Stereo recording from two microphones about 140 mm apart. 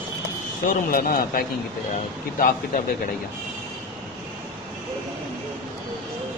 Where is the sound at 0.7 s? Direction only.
90° left.